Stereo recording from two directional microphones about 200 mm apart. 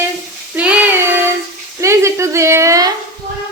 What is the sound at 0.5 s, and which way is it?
Child singing, 5° right (ahead or behind).